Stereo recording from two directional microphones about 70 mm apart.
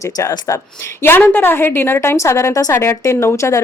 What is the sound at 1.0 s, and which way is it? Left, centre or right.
A woman's voice, left.